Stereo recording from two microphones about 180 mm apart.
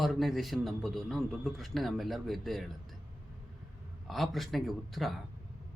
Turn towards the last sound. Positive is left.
turn(degrees=0)  # may be behind; listen again after turning